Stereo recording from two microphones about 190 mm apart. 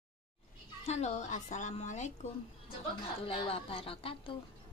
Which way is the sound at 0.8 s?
35° left (ahead or behind).